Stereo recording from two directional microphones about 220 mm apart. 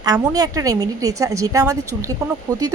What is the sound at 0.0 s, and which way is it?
A woman's voice, 20° right (ahead or behind).